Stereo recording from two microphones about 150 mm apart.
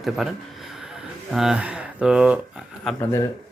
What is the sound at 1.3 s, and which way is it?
Speech, 5° right (ahead or behind).